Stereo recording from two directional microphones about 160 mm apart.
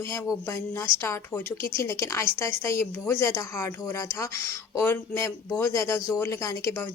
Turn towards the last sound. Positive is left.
turn(degrees=20)  # may be behind; listen again after turning